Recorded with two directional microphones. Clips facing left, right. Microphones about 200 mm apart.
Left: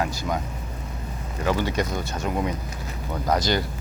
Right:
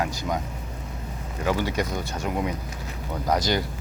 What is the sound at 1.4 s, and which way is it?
Speech, 10° right (ahead or behind).